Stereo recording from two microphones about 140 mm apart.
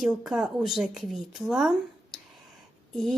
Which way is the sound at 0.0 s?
5° right (ahead or behind).